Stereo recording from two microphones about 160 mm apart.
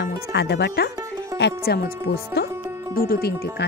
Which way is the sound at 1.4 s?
80° left.